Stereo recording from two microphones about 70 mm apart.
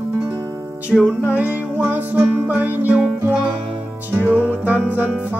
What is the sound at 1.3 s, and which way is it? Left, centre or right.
Music, right.